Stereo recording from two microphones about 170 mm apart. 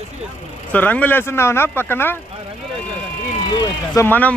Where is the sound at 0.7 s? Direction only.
10° left (ahead or behind).